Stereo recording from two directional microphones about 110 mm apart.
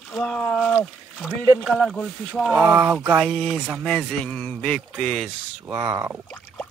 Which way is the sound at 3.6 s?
5° right (ahead or behind).